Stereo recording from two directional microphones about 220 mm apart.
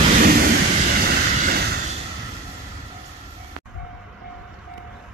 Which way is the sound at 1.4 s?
45° right (ahead or behind).